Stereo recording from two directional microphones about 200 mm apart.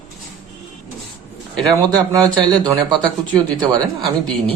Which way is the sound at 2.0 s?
20° right (ahead or behind).